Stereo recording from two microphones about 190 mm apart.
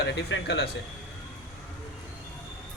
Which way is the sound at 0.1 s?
65° left (ahead or behind).